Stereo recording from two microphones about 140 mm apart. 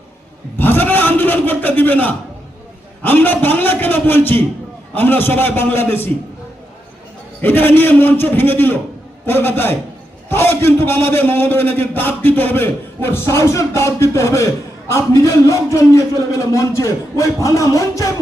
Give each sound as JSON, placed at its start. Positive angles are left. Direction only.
{"t": 0.6, "sound": "a sound", "side_deg": 15}
{"t": 3.0, "sound": "a man's voice", "side_deg": 15}
{"t": 7.4, "sound": "a man's voice", "side_deg": 15}